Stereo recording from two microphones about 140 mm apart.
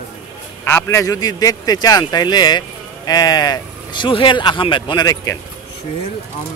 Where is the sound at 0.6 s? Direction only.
15° left (ahead or behind).